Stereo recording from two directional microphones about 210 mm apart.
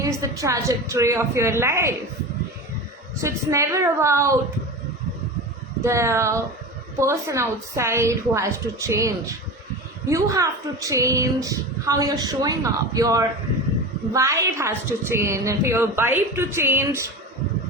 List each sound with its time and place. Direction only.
0.0 s a woman's voice: 15° right (ahead or behind)
3.2 s a woman's voice: 15° right (ahead or behind)
5.8 s a woman's voice: 15° right (ahead or behind)